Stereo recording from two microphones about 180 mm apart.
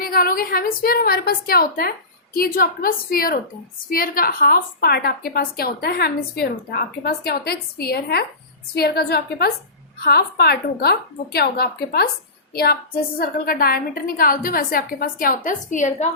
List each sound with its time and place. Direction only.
0.0 s a woman's voice: 55° left (ahead or behind)